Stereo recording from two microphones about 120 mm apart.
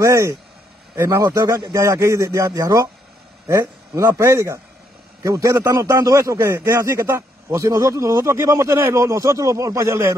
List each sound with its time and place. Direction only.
0.0 s a man's voice: 25° right (ahead or behind)